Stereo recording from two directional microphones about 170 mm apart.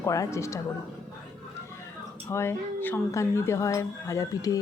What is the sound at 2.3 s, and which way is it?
A woman's voice, 15° left (ahead or behind).